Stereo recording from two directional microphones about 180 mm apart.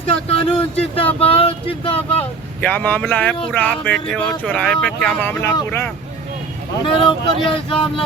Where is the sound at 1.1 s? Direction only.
30° left (ahead or behind).